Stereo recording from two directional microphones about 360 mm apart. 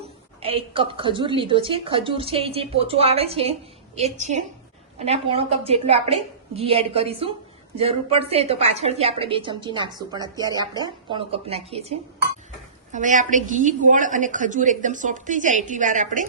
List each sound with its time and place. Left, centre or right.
0.4 s a woman's voice: centre